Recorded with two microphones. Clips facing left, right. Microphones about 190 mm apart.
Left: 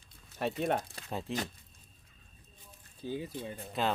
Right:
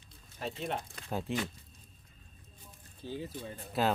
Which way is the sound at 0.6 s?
50° left (ahead or behind).